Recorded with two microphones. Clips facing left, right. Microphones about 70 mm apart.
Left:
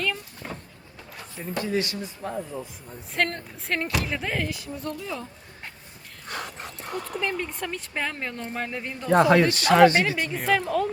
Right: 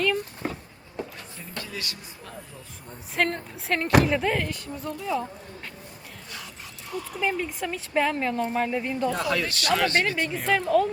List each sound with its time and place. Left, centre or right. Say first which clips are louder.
0.0 s vehicle: right 5 dB; centre
1.4 s speech: left 10 dB; left
3.2 s a woman's voice: right 1 dB; centre
6.2 s dog: left 9 dB; left
7.2 s a woman's voice: right 3 dB; centre
9.5 s speech: left 8 dB; left
10.0 s a woman's voice: even; centre